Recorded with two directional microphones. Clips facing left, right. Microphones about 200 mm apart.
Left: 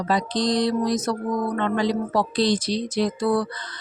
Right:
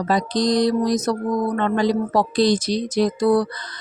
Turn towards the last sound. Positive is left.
turn(degrees=-40)  # may be behind; listen again after turning